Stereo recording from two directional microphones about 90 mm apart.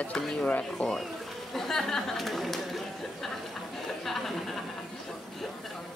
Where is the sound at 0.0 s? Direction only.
10° left (ahead or behind).